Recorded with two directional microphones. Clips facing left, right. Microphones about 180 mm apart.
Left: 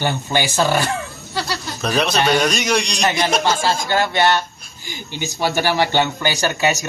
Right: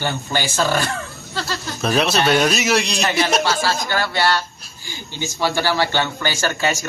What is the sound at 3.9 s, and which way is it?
Speech, 20° left (ahead or behind).